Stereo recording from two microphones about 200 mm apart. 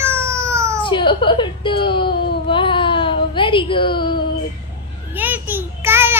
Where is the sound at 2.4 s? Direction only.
25° left (ahead or behind).